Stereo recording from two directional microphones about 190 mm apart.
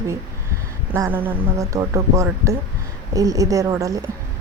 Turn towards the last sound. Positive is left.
turn(degrees=-15)  # may be behind; listen again after turning